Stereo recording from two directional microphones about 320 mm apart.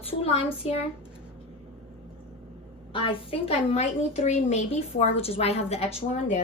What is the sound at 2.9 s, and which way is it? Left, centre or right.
A woman's voice, centre.